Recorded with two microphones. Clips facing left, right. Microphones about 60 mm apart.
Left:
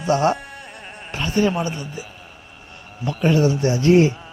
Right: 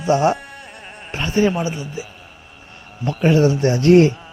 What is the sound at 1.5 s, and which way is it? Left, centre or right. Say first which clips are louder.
Speech: right 1 dB; centre.